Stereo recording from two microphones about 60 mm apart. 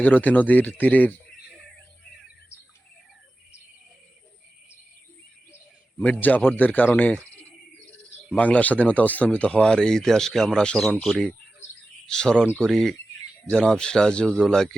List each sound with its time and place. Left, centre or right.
0.0 s speech: left
6.0 s speech: left
8.4 s speech: left